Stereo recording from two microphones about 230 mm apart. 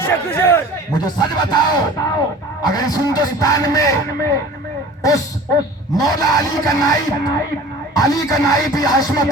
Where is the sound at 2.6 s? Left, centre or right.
Centre.